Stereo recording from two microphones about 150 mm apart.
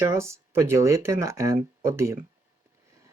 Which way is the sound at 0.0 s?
20° right (ahead or behind).